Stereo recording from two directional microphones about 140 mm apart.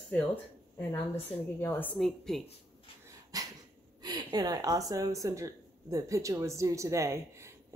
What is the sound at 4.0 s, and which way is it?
A woman's voice, 30° right (ahead or behind).